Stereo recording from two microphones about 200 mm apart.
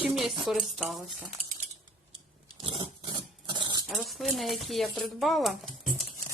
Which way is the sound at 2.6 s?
25° right (ahead or behind).